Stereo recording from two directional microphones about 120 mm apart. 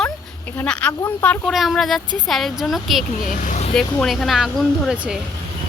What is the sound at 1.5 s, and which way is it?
Speech, centre (ahead or behind).